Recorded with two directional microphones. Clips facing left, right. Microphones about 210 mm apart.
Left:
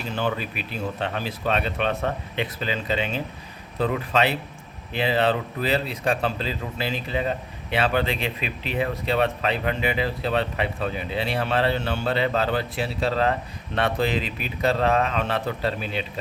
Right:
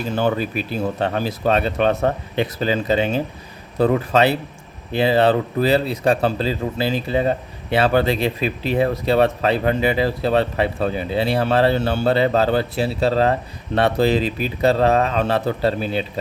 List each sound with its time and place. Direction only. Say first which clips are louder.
0.2 s speech: right 6 dB; 40° right (ahead or behind)